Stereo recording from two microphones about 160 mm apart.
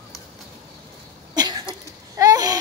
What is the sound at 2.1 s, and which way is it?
Babbling, 20° right (ahead or behind).